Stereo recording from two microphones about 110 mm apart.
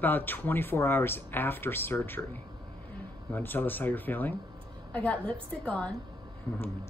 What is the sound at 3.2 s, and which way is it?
A man's voice, 15° left (ahead or behind).